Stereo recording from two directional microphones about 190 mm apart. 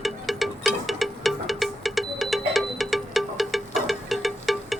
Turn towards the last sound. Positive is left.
turn(degrees=0)  # may be behind; listen again after turning